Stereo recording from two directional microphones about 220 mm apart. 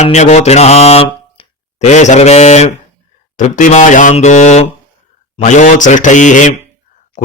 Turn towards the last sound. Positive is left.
turn(degrees=35)  # may be behind; listen again after turning